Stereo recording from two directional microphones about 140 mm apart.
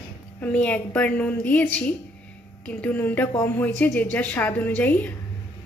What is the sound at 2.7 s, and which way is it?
A woman's voice, 10° left (ahead or behind).